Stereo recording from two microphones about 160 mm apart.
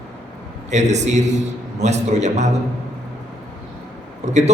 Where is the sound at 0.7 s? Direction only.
45° right (ahead or behind).